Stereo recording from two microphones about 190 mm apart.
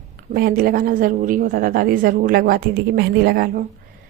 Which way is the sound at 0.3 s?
50° right (ahead or behind).